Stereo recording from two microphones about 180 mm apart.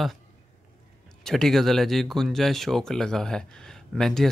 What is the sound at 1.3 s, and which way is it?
Speech, centre (ahead or behind).